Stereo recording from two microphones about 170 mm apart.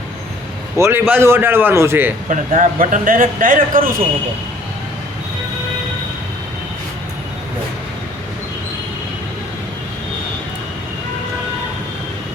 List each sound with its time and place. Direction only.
0.8 s a man's voice: 15° right (ahead or behind)
2.3 s a man's voice: 50° right (ahead or behind)